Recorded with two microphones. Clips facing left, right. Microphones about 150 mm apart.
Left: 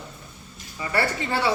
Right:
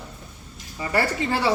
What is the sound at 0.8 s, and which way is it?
Speech, 40° right (ahead or behind).